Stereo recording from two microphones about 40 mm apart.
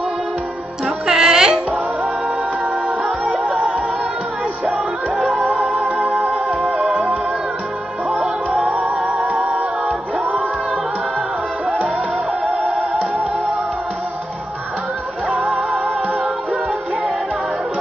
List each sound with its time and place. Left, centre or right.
0.8 s music: centre
8.6 s music: right